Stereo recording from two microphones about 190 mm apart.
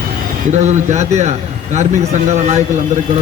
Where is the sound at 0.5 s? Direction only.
40° right (ahead or behind).